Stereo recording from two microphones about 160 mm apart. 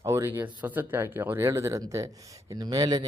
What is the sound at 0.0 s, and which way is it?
Speech, 20° right (ahead or behind).